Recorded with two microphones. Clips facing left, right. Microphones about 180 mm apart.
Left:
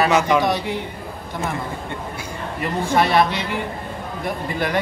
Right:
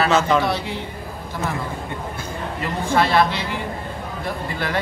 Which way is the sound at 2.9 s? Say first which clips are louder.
Even; 15° left (ahead or behind).